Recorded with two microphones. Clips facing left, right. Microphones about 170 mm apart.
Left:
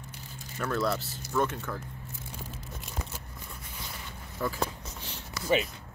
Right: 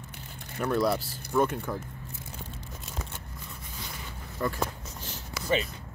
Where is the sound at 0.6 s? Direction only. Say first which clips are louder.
Right 3 dB; 15° right (ahead or behind).